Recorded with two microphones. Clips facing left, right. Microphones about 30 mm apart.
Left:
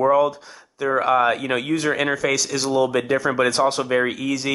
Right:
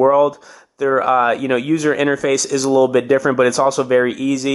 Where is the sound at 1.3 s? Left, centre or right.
Centre.